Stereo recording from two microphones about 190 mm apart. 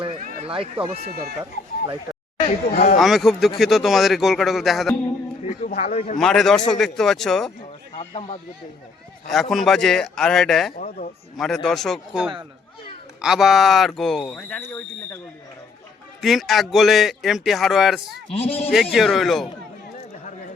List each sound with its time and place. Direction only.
0.4 s speech: 30° right (ahead or behind)
2.7 s speech: 55° left (ahead or behind)
3.0 s speech: centre (ahead or behind)
5.4 s a man's voice: 40° left (ahead or behind)
6.1 s speech: centre (ahead or behind)
7.9 s speech: 30° left (ahead or behind)
9.3 s speech: centre (ahead or behind)
10.8 s speech: 40° left (ahead or behind)
11.3 s speech: centre (ahead or behind)
16.2 s speech: centre (ahead or behind)
18.3 s a man's voice: 30° left (ahead or behind)
18.7 s speech: centre (ahead or behind)